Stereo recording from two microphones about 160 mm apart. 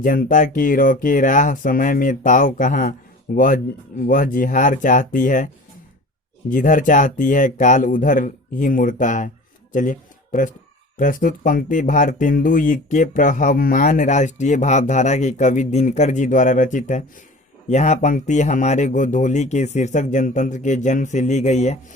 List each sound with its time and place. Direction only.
0.0 s speech: 60° left (ahead or behind)
6.5 s speech: 55° left (ahead or behind)